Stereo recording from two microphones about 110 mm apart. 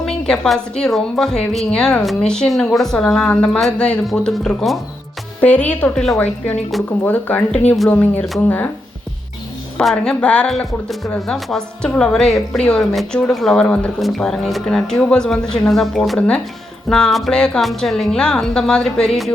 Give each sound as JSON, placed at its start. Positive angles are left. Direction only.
{"t": 0.0, "sound": "speech", "side_deg": 5}
{"t": 5.4, "sound": "a woman's voice", "side_deg": 15}
{"t": 9.7, "sound": "speech", "side_deg": 5}